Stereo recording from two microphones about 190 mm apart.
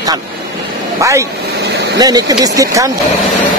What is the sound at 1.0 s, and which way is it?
Speech, 15° right (ahead or behind).